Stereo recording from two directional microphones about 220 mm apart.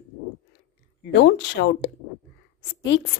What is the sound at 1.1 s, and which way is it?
Speech, 50° left (ahead or behind).